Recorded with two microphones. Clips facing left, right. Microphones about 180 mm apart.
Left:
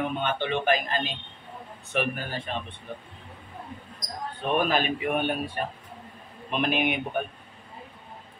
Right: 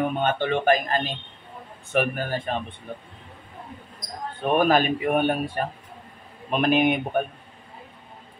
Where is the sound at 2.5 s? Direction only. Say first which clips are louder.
Right 3 dB; 50° right (ahead or behind).